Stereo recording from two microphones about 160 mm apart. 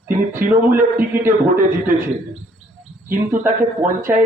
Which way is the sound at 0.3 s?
60° right (ahead or behind).